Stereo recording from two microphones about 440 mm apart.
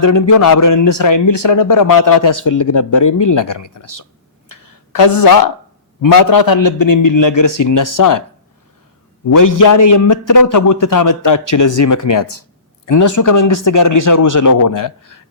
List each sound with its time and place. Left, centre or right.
0.0 s a man's voice: left
4.6 s a sound: left
6.0 s a man's voice: left
9.3 s a man's voice: left